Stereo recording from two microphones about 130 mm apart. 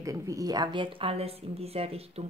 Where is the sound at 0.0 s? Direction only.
25° right (ahead or behind).